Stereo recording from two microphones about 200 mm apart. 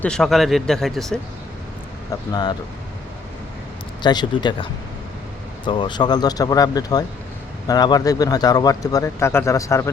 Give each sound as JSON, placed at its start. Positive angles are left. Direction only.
{"t": 0.0, "sound": "speech", "side_deg": 5}
{"t": 2.3, "sound": "speech", "side_deg": 20}
{"t": 4.0, "sound": "speech", "side_deg": 20}
{"t": 5.6, "sound": "a man's voice", "side_deg": 25}